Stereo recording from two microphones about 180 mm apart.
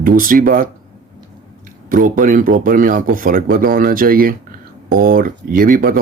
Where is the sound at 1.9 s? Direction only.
50° right (ahead or behind).